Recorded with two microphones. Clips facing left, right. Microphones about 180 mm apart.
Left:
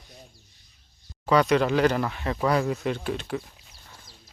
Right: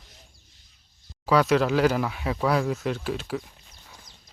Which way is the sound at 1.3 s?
Centre (ahead or behind).